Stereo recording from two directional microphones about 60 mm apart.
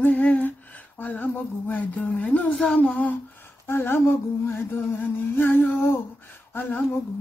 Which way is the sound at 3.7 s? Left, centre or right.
Left.